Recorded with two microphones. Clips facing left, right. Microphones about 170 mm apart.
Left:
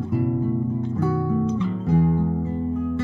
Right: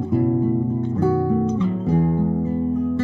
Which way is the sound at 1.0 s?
30° right (ahead or behind).